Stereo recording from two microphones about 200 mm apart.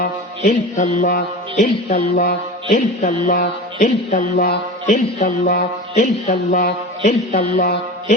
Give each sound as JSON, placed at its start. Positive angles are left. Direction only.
{"t": 0.0, "sound": "music", "side_deg": 40}